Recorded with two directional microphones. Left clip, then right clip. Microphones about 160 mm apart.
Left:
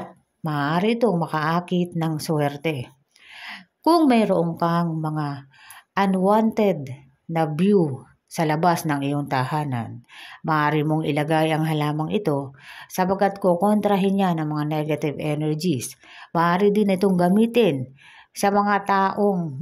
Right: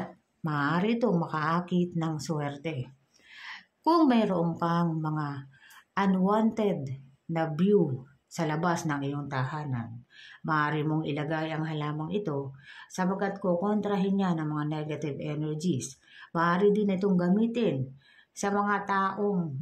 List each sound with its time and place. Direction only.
0.4 s speech: 30° left (ahead or behind)
3.3 s a sound: 35° left (ahead or behind)
4.1 s speech: 30° left (ahead or behind)